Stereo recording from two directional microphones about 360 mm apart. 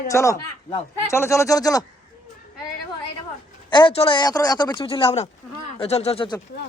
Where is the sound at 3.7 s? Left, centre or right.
Centre.